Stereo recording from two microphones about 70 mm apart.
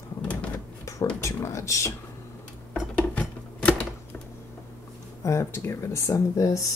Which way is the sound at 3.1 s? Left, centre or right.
Left.